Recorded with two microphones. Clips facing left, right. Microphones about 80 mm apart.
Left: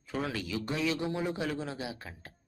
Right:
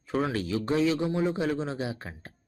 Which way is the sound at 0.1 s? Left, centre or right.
Right.